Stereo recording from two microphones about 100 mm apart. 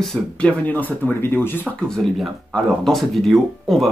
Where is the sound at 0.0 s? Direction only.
10° left (ahead or behind).